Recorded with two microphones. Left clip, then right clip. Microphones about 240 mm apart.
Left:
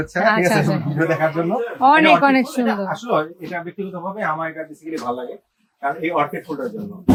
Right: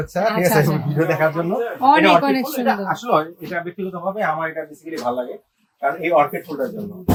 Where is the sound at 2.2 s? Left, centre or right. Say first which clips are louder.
Left 4 dB; centre.